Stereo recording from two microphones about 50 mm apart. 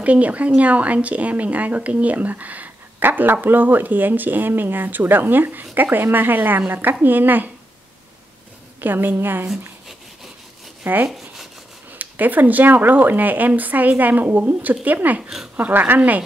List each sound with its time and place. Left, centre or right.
0.0 s speech: right
8.8 s speech: right
10.8 s speech: right
11.1 s rub: centre
12.0 s speech: right